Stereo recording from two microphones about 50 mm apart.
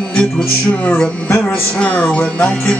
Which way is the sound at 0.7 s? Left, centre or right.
Left.